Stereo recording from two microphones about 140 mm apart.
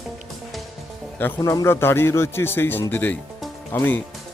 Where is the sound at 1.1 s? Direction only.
15° left (ahead or behind).